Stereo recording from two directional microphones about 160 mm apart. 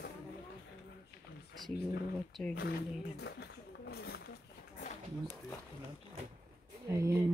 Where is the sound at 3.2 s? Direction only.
90° left.